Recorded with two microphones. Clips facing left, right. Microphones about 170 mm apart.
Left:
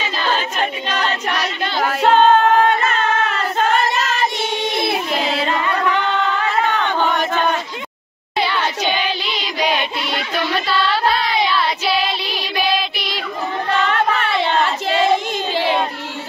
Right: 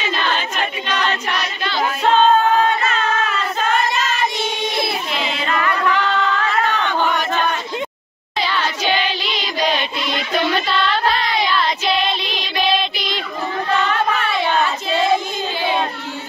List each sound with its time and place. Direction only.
1.6 s singing: 50° left (ahead or behind)
3.5 s child singing: 60° left (ahead or behind)
5.1 s music: 40° left (ahead or behind)
5.5 s singing: 25° left (ahead or behind)
11.6 s music: 5° left (ahead or behind)